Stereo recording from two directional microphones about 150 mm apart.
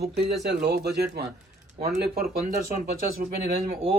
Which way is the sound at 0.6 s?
90° right.